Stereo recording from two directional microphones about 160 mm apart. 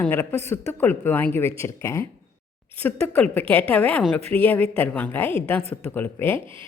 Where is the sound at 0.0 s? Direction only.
10° left (ahead or behind).